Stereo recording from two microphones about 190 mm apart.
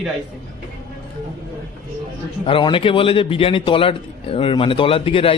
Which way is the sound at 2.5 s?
25° left (ahead or behind).